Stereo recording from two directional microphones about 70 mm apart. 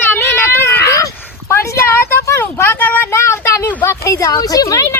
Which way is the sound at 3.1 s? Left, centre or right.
Left.